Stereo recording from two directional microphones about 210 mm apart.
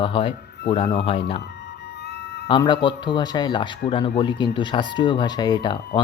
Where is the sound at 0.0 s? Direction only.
25° left (ahead or behind).